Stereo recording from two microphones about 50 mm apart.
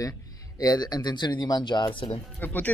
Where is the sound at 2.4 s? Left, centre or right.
Left.